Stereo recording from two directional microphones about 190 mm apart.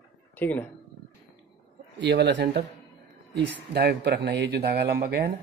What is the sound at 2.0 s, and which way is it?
Speech, 65° right (ahead or behind).